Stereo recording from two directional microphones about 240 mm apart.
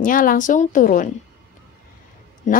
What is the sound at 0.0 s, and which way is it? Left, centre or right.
Speech, left.